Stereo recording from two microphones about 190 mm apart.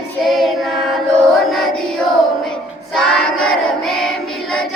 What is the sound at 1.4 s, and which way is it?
Music, centre (ahead or behind).